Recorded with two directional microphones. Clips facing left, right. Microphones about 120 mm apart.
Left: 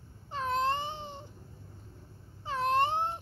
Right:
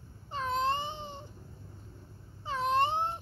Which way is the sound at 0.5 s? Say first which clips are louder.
Even; 65° left (ahead or behind).